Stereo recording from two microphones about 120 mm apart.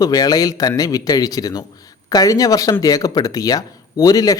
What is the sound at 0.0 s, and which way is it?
Speech, 30° left (ahead or behind).